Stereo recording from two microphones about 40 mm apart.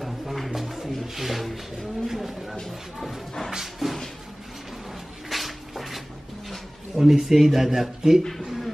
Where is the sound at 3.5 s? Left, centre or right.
Centre.